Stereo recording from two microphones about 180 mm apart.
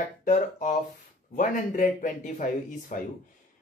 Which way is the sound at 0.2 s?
45° left (ahead or behind).